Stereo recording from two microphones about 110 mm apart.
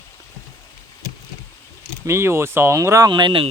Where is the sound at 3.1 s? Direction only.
45° right (ahead or behind).